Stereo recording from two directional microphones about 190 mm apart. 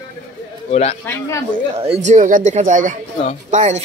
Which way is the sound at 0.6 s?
35° left (ahead or behind).